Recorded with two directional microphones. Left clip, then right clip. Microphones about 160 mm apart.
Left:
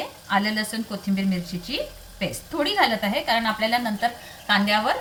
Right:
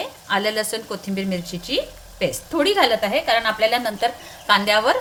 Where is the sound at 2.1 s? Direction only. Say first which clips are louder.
Right 5 dB; 90° right.